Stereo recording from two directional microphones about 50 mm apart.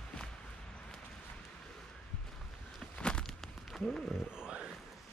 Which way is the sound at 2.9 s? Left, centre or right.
Centre.